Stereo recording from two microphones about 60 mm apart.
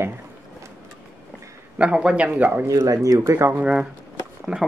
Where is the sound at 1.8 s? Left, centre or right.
Centre.